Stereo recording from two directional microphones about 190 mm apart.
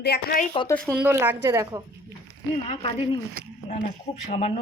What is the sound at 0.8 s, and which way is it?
Speech, 15° right (ahead or behind).